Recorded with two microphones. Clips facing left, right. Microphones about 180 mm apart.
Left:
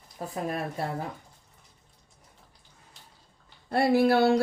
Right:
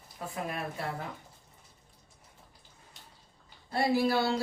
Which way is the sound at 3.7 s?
60° left (ahead or behind).